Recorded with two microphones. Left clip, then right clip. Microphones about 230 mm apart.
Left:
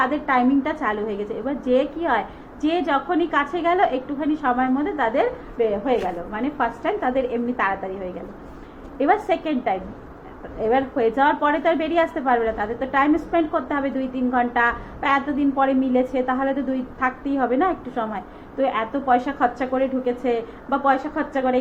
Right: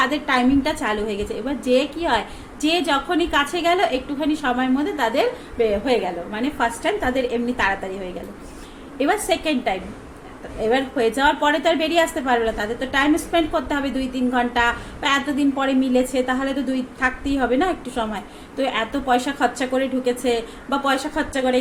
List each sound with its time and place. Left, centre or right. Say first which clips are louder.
0.0 s a woman's voice: even; right
9.0 s a woman's voice: left 1 dB; right